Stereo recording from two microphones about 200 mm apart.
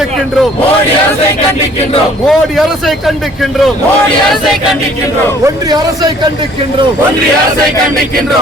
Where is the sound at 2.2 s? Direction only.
Centre (ahead or behind).